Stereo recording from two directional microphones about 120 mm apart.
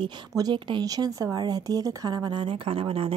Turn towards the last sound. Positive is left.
turn(degrees=-50)  # may be behind; listen again after turning